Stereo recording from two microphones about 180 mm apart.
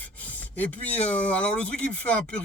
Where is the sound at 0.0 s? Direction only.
10° left (ahead or behind).